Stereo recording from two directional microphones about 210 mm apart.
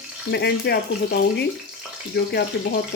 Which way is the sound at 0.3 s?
50° left (ahead or behind).